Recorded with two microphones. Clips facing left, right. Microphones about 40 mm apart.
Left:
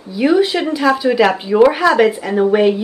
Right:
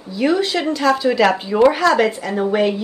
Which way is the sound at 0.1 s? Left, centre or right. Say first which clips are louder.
Left 4 dB; centre.